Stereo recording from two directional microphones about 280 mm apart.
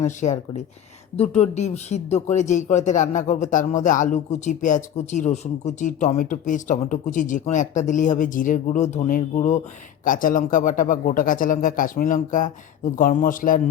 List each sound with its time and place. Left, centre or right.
0.0 s speech: left